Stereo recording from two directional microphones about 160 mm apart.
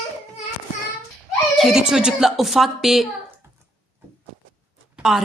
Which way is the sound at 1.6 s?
5° right (ahead or behind).